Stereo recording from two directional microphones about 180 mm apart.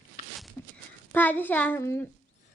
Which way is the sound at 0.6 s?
15° left (ahead or behind).